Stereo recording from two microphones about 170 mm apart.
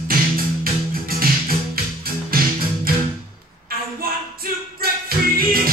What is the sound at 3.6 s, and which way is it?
A capella, 60° right (ahead or behind).